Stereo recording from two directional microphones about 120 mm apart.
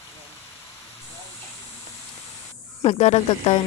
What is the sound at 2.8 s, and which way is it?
Speech, 60° left (ahead or behind).